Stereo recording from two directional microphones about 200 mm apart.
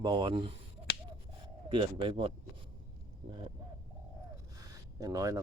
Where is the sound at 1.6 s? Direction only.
25° right (ahead or behind).